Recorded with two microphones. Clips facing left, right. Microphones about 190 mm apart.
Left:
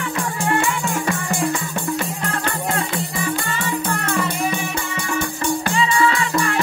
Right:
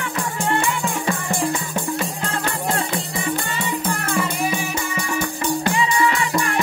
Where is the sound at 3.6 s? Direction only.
15° right (ahead or behind).